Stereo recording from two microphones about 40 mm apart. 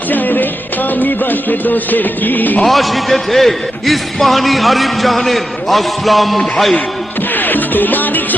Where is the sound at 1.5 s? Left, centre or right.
Left.